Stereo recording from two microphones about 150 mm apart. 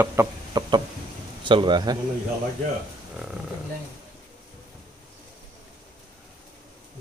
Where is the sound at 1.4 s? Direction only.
35° right (ahead or behind).